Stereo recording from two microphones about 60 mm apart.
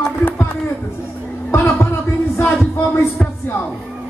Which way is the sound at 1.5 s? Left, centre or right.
Left.